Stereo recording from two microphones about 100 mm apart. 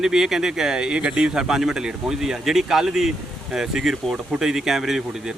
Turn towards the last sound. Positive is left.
turn(degrees=-5)  # may be behind; listen again after turning